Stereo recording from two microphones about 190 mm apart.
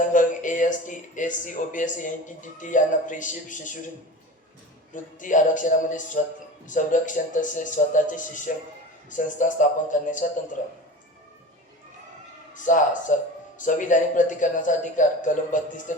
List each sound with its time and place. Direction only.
0.1 s speech: 40° left (ahead or behind)
5.2 s speech: 40° left (ahead or behind)
12.5 s speech: 45° left (ahead or behind)